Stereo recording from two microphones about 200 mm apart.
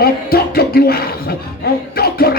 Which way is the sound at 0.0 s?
50° left (ahead or behind).